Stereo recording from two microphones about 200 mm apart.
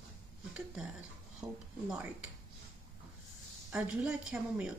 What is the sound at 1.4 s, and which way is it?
Speech, 15° right (ahead or behind).